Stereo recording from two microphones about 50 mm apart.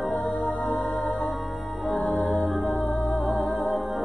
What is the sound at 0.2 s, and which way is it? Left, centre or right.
Music, centre.